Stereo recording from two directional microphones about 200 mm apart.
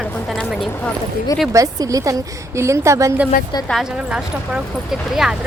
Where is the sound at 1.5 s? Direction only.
15° right (ahead or behind).